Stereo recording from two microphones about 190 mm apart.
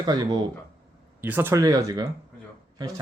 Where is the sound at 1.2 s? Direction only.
10° right (ahead or behind).